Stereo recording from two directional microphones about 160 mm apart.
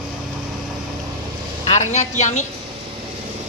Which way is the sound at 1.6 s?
45° left (ahead or behind).